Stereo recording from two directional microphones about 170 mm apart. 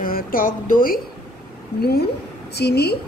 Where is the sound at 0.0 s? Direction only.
55° left (ahead or behind).